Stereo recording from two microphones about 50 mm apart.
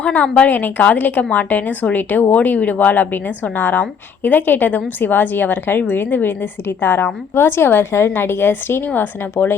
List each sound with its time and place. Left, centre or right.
0.0 s a woman's voice: left